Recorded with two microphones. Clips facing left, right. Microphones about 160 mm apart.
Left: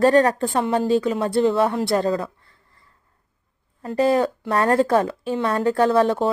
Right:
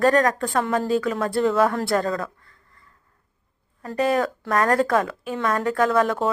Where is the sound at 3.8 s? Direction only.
30° left (ahead or behind).